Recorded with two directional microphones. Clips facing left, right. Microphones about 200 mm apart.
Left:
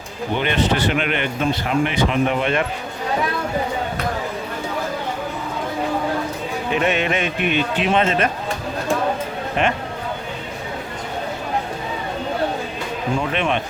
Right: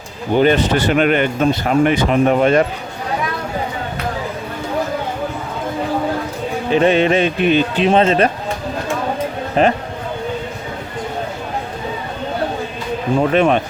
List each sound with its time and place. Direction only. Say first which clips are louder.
0.3 s speech: right 7 dB; 40° right (ahead or behind)
6.7 s a man's voice: right 7 dB; 30° right (ahead or behind)
9.6 s a man's voice: right 7 dB; 35° right (ahead or behind)
13.1 s a man's voice: right 9 dB; 40° right (ahead or behind)